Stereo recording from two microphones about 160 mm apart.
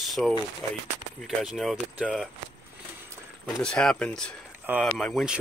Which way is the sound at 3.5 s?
5° left (ahead or behind).